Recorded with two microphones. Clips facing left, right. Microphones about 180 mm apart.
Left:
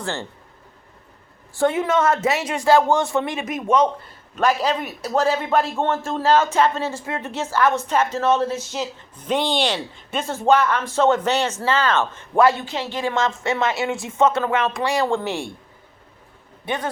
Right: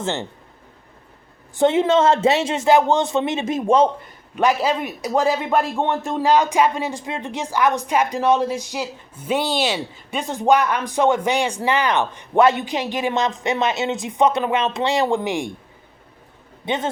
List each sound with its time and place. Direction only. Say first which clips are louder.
0.0 s speech: right 3 dB; 20° right (ahead or behind)
1.5 s speech: right 3 dB; 25° right (ahead or behind)
4.4 s speech: right 1 dB; 10° right (ahead or behind)
10.2 s speech: even; 15° right (ahead or behind)
16.6 s speech: right 2 dB; 20° right (ahead or behind)